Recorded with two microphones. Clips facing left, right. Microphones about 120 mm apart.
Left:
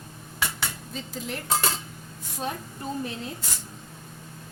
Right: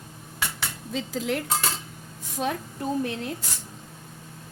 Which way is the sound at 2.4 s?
90° right.